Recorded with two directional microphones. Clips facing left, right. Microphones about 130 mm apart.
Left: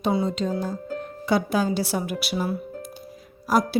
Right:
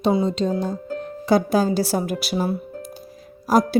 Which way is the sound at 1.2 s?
40° right (ahead or behind).